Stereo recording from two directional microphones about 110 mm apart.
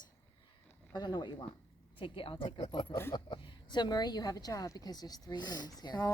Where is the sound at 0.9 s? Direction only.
40° left (ahead or behind).